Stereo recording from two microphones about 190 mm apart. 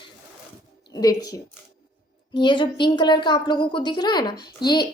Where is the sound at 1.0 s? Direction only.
20° left (ahead or behind).